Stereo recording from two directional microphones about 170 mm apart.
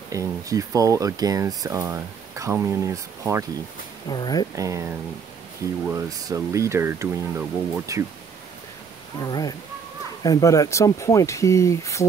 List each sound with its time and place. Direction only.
0.1 s speech: 20° right (ahead or behind)
4.1 s speech: 25° left (ahead or behind)
4.6 s speech: 15° right (ahead or behind)
9.2 s speech: 20° left (ahead or behind)